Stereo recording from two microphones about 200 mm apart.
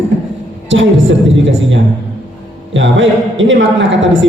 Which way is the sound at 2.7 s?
70° right (ahead or behind).